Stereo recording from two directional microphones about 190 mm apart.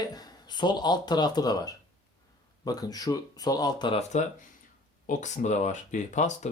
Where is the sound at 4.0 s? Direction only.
40° left (ahead or behind).